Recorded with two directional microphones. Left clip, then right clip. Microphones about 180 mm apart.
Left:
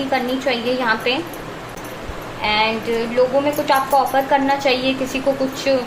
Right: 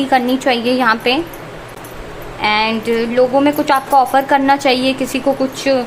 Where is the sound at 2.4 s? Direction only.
50° right (ahead or behind).